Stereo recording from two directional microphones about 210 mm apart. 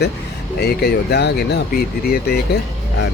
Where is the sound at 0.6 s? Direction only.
50° left (ahead or behind).